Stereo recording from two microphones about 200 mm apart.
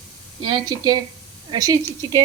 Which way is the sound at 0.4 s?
20° right (ahead or behind).